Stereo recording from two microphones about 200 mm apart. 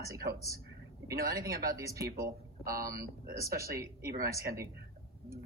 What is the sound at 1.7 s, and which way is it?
Speech, 15° right (ahead or behind).